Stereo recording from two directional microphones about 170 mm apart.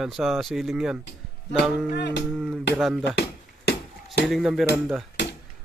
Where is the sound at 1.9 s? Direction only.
80° left.